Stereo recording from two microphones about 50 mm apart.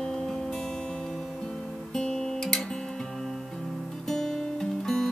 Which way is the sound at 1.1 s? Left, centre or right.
Centre.